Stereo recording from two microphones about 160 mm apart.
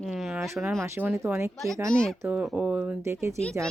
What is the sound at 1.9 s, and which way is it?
Speech, 5° left (ahead or behind).